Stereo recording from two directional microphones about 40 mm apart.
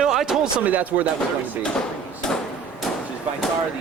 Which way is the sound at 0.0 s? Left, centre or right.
Centre.